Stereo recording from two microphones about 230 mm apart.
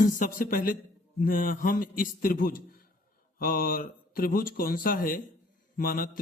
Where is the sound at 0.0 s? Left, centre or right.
Left.